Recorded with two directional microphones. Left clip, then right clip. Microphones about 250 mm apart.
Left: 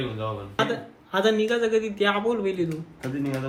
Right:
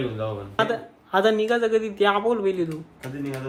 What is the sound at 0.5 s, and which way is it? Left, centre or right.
A man's voice, centre.